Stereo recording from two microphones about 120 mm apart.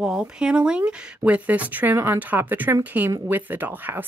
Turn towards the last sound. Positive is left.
turn(degrees=-15)  # may be behind; listen again after turning